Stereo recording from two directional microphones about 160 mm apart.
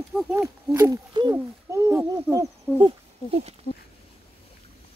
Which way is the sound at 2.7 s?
15° left (ahead or behind).